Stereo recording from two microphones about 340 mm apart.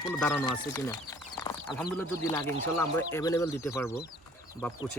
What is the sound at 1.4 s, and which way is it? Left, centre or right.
Chicken, centre.